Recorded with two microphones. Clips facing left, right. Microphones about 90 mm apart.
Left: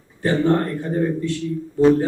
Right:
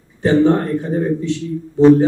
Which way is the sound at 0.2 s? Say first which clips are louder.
Right 5 dB; 20° right (ahead or behind).